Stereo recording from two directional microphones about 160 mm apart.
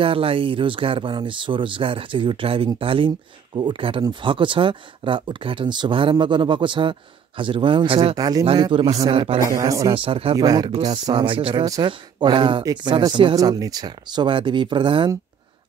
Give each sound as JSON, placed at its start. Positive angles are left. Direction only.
{"t": 0.0, "sound": "speech", "side_deg": -35}
{"t": 8.2, "sound": "speech", "side_deg": -25}
{"t": 9.5, "sound": "speech", "side_deg": -20}
{"t": 9.9, "sound": "speech", "side_deg": -35}
{"t": 10.3, "sound": "speech", "side_deg": -25}